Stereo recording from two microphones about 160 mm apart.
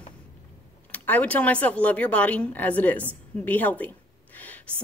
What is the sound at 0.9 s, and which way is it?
Speech, 10° left (ahead or behind).